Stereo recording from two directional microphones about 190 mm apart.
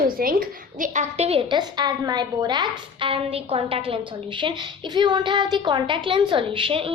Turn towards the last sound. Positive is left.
turn(degrees=-30)  # may be behind; listen again after turning